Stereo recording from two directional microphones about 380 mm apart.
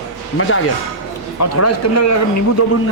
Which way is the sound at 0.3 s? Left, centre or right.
Left.